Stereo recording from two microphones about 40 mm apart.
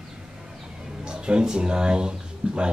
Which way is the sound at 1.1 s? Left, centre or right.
Right.